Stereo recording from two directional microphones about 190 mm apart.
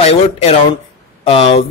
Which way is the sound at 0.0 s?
35° left (ahead or behind).